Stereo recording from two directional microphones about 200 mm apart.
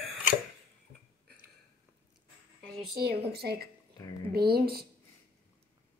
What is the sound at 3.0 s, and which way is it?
Speech, 50° right (ahead or behind).